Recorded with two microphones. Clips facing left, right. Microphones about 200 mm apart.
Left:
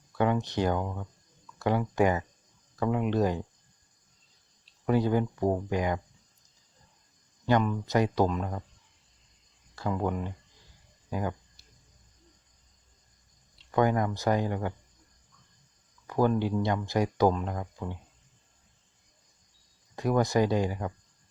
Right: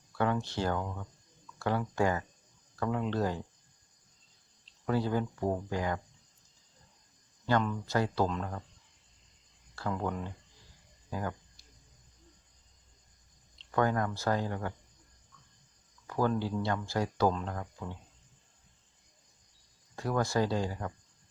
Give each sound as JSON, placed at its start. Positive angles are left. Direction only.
{"t": 0.2, "sound": "speech", "side_deg": 15}
{"t": 4.9, "sound": "speech", "side_deg": 15}
{"t": 7.4, "sound": "speech", "side_deg": 15}
{"t": 9.7, "sound": "speech", "side_deg": 15}
{"t": 13.6, "sound": "speech", "side_deg": 15}
{"t": 16.0, "sound": "speech", "side_deg": 15}
{"t": 20.0, "sound": "speech", "side_deg": 15}